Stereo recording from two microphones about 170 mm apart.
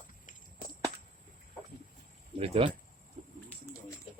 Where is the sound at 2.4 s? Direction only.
35° right (ahead or behind).